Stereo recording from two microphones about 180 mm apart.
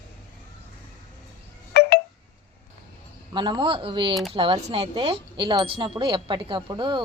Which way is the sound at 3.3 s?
25° right (ahead or behind).